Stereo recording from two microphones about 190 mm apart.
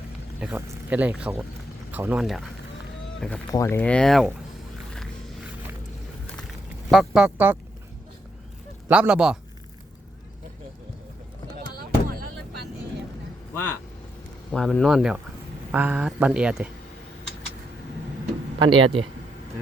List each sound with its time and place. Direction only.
0.3 s speech: 10° right (ahead or behind)
6.9 s speech: centre (ahead or behind)
8.9 s speech: 5° right (ahead or behind)
11.8 s a sound: 50° right (ahead or behind)
14.5 s speech: 5° left (ahead or behind)
18.6 s speech: 25° right (ahead or behind)